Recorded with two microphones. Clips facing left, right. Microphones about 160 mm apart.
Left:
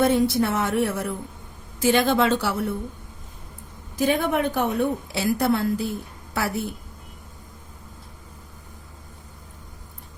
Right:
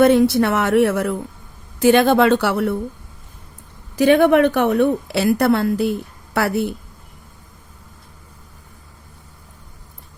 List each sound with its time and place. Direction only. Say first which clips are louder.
0.0 s a woman's voice: right 6 dB; 70° right (ahead or behind)
1.8 s speech: right 6 dB; 60° right (ahead or behind)
3.9 s a woman's voice: right 9 dB; 70° right (ahead or behind)